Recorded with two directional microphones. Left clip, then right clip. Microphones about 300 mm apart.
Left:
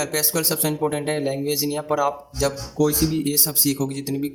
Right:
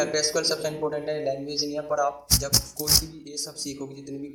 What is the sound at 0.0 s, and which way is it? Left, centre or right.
Speech, left.